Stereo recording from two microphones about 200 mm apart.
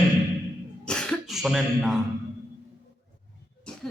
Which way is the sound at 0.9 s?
5° left (ahead or behind).